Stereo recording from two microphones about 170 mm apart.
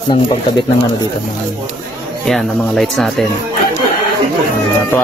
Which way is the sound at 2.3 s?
Centre (ahead or behind).